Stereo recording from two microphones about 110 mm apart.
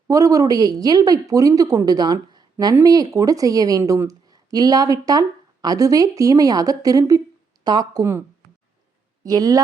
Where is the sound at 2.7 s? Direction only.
35° right (ahead or behind).